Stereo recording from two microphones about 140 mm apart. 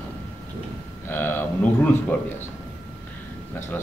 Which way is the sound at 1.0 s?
15° left (ahead or behind).